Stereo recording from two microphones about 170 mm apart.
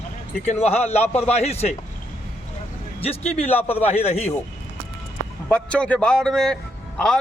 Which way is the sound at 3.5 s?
10° left (ahead or behind).